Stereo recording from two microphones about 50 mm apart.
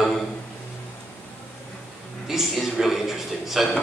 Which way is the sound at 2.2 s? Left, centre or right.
Centre.